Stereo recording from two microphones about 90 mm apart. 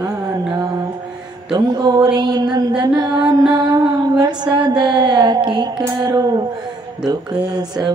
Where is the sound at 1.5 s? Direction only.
45° right (ahead or behind).